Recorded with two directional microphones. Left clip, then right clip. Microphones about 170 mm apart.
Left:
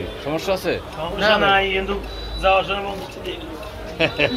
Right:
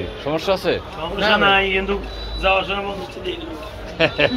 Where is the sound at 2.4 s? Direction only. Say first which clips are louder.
Left 1 dB; 35° left (ahead or behind).